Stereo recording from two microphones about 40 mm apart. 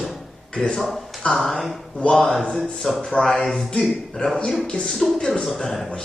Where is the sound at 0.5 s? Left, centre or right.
Centre.